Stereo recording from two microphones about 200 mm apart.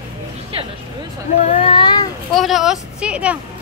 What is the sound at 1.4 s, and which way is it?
Speech, 30° left (ahead or behind).